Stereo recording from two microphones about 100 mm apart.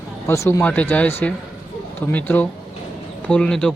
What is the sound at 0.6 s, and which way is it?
Speech, 15° left (ahead or behind).